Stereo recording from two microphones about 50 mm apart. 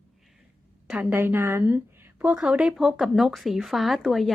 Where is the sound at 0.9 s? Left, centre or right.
Right.